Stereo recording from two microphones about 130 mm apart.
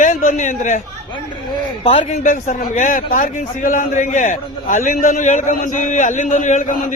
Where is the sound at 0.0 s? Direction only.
70° left (ahead or behind).